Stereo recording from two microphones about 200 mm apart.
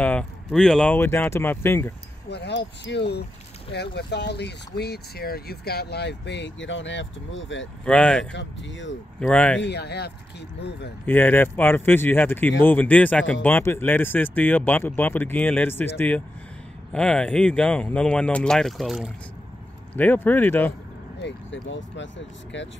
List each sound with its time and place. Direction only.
0.0 s speech: 5° left (ahead or behind)
2.2 s speech: 55° left (ahead or behind)
7.8 s speech: 5° left (ahead or behind)
8.3 s speech: 65° left (ahead or behind)
9.2 s speech: 5° left (ahead or behind)
9.6 s speech: 55° left (ahead or behind)
11.1 s speech: 10° left (ahead or behind)
19.9 s speech: 10° left (ahead or behind)
21.2 s speech: 65° left (ahead or behind)